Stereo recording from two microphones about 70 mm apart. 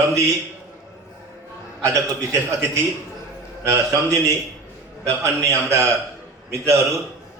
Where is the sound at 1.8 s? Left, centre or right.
Right.